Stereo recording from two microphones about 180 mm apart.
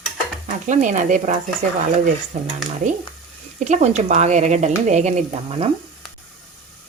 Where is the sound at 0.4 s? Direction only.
45° right (ahead or behind).